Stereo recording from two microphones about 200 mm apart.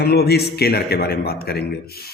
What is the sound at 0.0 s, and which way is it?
A man's voice, 55° left (ahead or behind).